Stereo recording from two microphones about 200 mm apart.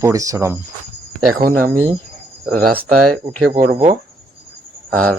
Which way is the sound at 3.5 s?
40° right (ahead or behind).